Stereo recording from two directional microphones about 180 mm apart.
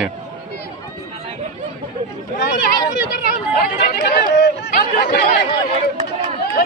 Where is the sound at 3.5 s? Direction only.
55° left (ahead or behind).